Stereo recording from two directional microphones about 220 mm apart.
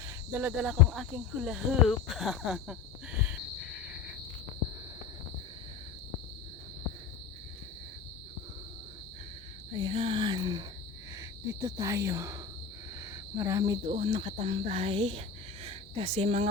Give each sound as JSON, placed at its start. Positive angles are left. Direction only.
{"t": 0.0, "sound": "speech", "side_deg": -10}
{"t": 9.7, "sound": "speech", "side_deg": -20}
{"t": 15.6, "sound": "cricket", "side_deg": -25}